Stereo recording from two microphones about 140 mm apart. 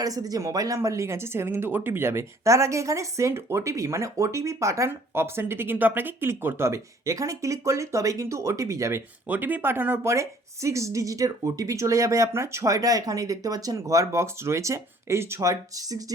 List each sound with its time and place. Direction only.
0.0 s speech: 25° right (ahead or behind)